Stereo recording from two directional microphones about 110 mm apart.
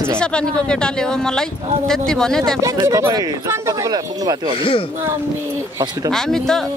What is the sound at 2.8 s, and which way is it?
Speech, 30° right (ahead or behind).